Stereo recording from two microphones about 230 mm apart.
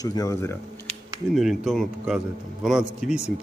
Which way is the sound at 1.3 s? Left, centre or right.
Centre.